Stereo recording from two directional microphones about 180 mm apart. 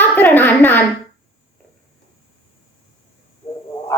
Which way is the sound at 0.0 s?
10° left (ahead or behind).